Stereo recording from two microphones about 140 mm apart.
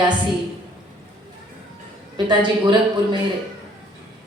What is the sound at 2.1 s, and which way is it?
A woman's voice, 35° right (ahead or behind).